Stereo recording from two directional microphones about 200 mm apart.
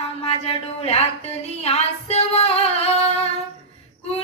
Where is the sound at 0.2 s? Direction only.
30° left (ahead or behind).